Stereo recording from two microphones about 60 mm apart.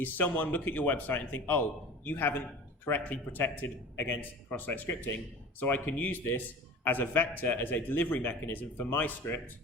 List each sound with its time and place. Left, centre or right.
0.0 s speech: left